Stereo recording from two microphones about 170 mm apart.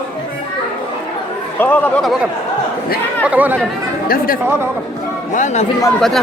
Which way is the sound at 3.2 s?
10° right (ahead or behind).